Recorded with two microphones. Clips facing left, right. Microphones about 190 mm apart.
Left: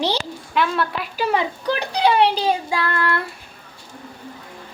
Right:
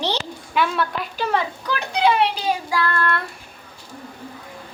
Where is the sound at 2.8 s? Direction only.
15° left (ahead or behind).